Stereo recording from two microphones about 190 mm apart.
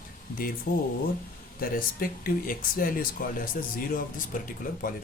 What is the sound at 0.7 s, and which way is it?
Speech, 50° left (ahead or behind).